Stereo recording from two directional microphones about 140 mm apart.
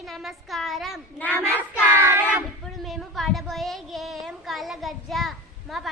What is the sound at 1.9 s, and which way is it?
Child singing, 15° right (ahead or behind).